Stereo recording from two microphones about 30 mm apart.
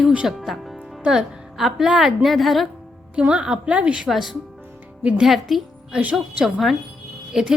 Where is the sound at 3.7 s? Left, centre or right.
Right.